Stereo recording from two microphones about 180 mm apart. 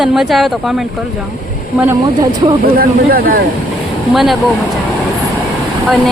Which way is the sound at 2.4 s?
30° right (ahead or behind).